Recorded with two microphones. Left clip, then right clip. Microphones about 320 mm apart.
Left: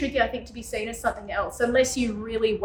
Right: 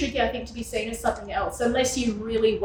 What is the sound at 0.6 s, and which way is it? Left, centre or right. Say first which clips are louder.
A woman's voice: right 1 dB; centre.